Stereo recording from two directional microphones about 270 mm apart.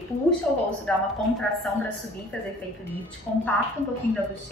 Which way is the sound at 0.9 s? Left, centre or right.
Centre.